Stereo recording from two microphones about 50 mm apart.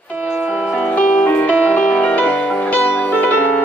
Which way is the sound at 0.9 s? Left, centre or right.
Left.